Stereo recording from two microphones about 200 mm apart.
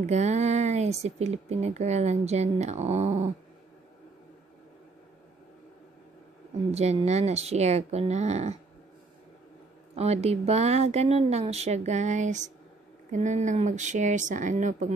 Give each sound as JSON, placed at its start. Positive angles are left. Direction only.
{"t": 0.0, "sound": "speech", "side_deg": -35}
{"t": 6.7, "sound": "speech", "side_deg": -30}
{"t": 9.9, "sound": "speech", "side_deg": -30}